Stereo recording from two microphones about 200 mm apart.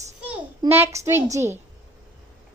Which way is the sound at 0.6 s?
15° right (ahead or behind).